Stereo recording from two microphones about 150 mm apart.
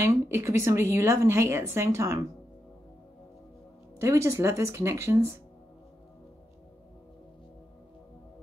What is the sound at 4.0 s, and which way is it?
Speech, 20° right (ahead or behind).